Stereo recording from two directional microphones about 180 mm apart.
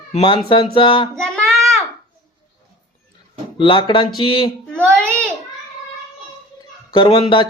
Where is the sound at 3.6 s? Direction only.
30° left (ahead or behind).